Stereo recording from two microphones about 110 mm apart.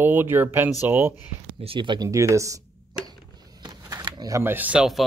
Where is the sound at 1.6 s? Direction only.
55° right (ahead or behind).